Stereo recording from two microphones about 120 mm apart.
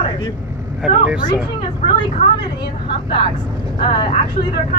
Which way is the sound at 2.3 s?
40° left (ahead or behind).